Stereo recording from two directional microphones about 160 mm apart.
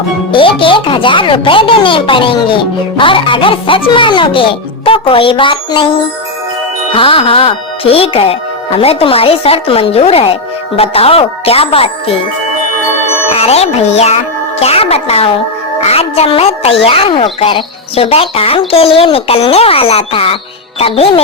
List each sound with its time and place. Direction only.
0.3 s speech: 30° left (ahead or behind)
6.9 s speech: 35° left (ahead or behind)
13.3 s speech: 40° left (ahead or behind)